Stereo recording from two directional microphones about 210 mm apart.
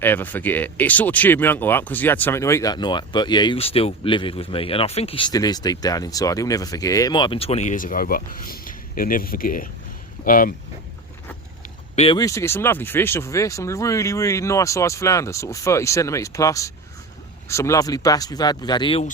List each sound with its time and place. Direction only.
0.0 s speech: 10° left (ahead or behind); by 10.5 s 40° left (ahead or behind)
11.9 s speech: 20° left (ahead or behind)